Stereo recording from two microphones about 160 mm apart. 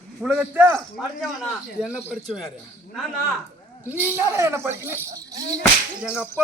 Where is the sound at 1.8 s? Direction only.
5° right (ahead or behind).